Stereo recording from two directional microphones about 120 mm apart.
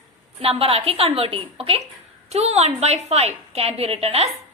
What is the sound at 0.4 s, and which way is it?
A woman's voice, 55° right (ahead or behind).